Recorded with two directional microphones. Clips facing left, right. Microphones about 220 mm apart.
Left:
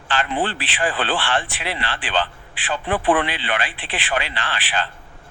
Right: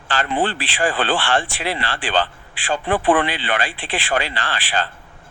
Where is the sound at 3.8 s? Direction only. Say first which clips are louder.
Right 4 dB; 30° right (ahead or behind).